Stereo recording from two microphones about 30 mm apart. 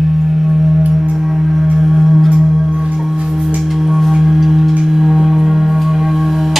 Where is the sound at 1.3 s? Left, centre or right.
Centre.